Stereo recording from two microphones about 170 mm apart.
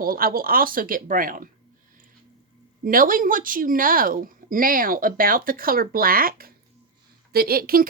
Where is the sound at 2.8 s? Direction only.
55° right (ahead or behind).